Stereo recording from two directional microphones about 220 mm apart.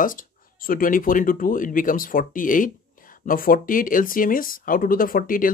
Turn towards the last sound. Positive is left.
turn(degrees=40)  # may be behind; listen again after turning